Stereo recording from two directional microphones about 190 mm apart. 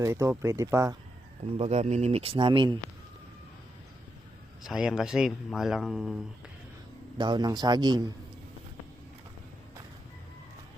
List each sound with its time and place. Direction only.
0.0 s speech: 15° right (ahead or behind)
1.5 s speech: 35° right (ahead or behind)
4.6 s speech: centre (ahead or behind)
7.2 s a man's voice: 20° right (ahead or behind)